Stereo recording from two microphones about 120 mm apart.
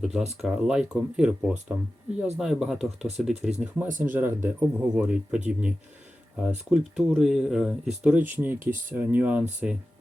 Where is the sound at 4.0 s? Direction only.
15° right (ahead or behind).